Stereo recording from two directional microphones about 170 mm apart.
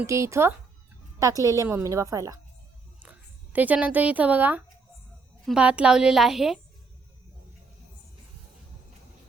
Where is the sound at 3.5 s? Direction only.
10° right (ahead or behind).